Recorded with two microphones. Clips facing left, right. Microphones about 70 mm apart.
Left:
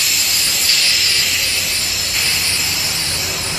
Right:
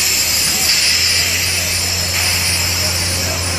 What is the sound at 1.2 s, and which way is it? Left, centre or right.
Vehicle, centre.